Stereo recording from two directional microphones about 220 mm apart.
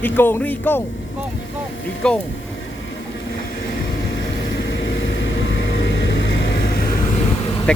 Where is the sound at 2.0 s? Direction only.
5° left (ahead or behind).